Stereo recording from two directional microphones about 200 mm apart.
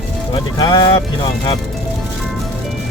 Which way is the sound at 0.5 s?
20° left (ahead or behind).